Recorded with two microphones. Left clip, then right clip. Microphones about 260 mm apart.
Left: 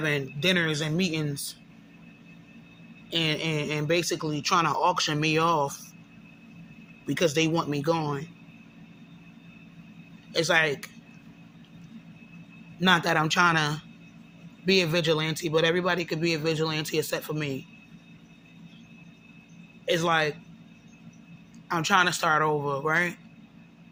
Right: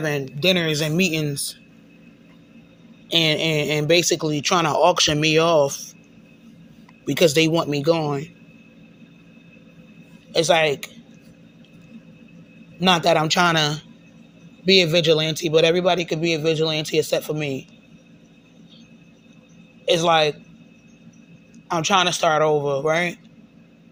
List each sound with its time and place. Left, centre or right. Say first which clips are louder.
0.4 s speech: right 6 dB; centre
3.1 s speech: right 8 dB; centre
7.0 s speech: right 8 dB; centre
10.3 s speech: right 6 dB; centre
12.8 s speech: right 5 dB; centre
19.8 s speech: right 7 dB; centre
21.7 s speech: right 4 dB; centre